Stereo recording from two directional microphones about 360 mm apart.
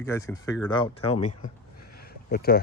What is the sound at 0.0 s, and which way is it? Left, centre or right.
Speech, centre.